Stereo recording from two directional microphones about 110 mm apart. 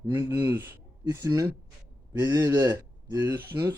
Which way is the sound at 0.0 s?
35° right (ahead or behind).